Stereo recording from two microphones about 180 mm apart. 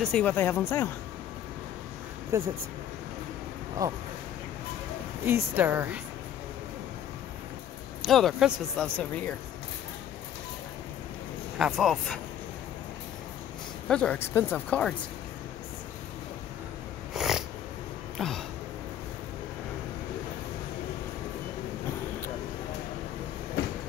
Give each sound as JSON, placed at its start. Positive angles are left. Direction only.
{"t": 0.0, "sound": "speech", "side_deg": 5}
{"t": 2.3, "sound": "a woman's voice", "side_deg": -15}
{"t": 5.2, "sound": "a woman's voice", "side_deg": -10}
{"t": 8.0, "sound": "speech", "side_deg": 0}
{"t": 11.5, "sound": "speech", "side_deg": -5}
{"t": 13.8, "sound": "speech", "side_deg": 5}
{"t": 17.1, "sound": "cat", "side_deg": 0}
{"t": 18.1, "sound": "a sound", "side_deg": 0}